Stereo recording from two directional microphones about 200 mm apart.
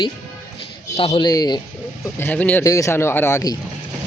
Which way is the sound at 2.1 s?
10° left (ahead or behind).